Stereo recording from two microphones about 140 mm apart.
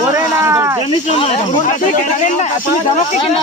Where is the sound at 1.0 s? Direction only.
50° left (ahead or behind).